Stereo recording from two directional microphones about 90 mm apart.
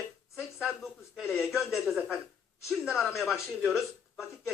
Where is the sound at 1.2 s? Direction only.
25° left (ahead or behind).